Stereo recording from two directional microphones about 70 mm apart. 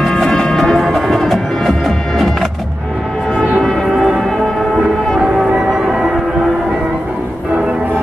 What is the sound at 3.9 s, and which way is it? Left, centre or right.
Music, centre.